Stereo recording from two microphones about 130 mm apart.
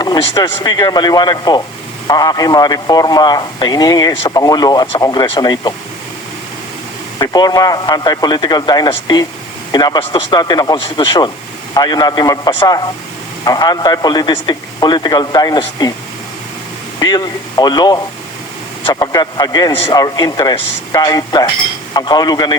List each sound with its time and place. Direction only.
0.3 s a man's voice: 30° left (ahead or behind)
7.2 s a man's voice: 30° left (ahead or behind)
17.0 s a man's voice: 30° left (ahead or behind)
18.8 s a man's voice: 45° left (ahead or behind)
19.0 s a man's voice: 30° left (ahead or behind)